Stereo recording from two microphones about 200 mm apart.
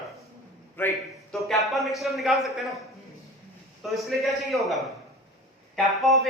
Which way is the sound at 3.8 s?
Centre (ahead or behind).